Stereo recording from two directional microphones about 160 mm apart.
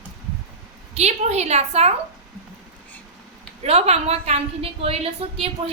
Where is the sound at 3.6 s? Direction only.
40° right (ahead or behind).